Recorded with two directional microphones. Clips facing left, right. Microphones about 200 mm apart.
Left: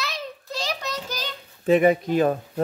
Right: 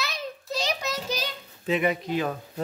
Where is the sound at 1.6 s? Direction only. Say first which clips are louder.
Left 8 dB; 45° left (ahead or behind).